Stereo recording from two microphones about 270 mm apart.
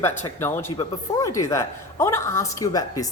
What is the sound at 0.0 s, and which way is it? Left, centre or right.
A woman's voice, centre.